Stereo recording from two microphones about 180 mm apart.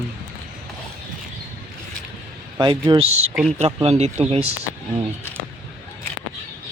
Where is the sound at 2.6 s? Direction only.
20° right (ahead or behind).